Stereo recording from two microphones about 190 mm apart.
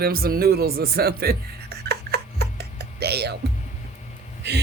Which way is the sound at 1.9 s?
55° right (ahead or behind).